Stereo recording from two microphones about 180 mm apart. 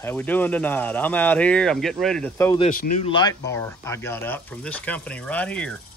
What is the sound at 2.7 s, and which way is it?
Speech, 55° left (ahead or behind).